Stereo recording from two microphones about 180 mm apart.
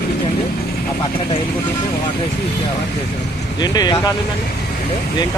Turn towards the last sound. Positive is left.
turn(degrees=25)  # may be behind; listen again after turning